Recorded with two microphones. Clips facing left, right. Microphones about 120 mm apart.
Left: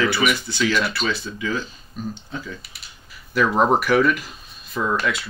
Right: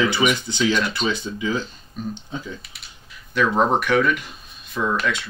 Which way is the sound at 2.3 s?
20° right (ahead or behind).